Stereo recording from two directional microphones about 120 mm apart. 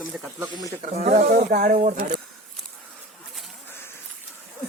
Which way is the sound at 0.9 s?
65° right (ahead or behind).